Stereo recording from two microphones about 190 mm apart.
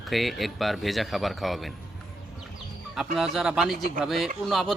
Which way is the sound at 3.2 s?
Centre (ahead or behind).